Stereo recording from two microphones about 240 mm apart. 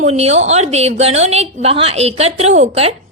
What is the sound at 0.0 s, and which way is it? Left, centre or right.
A woman's voice, right.